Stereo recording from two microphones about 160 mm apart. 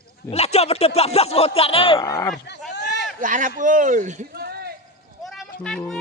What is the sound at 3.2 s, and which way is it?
Speech, 55° right (ahead or behind).